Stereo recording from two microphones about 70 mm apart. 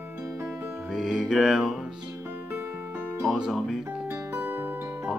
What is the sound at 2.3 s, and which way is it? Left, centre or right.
Music, right.